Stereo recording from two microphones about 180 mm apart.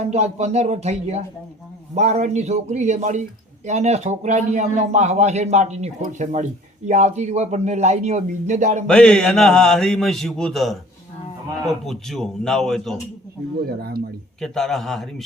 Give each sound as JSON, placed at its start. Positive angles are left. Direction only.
{"t": 0.0, "sound": "a man's voice", "side_deg": -40}
{"t": 8.9, "sound": "a man's voice", "side_deg": 5}
{"t": 13.7, "sound": "speech", "side_deg": -60}
{"t": 14.4, "sound": "a man's voice", "side_deg": 0}